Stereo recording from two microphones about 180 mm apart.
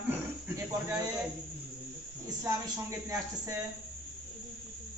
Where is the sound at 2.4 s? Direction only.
15° right (ahead or behind).